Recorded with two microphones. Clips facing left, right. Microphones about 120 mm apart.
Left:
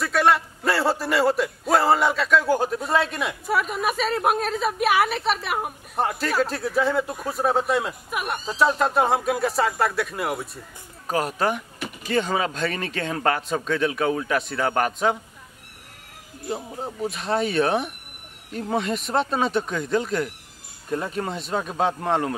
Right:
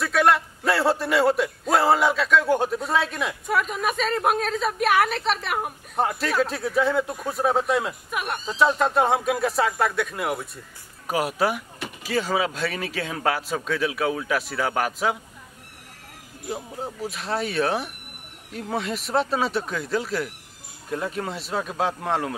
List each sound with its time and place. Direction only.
0.0 s a man's voice: centre (ahead or behind)
16.4 s a man's voice: centre (ahead or behind)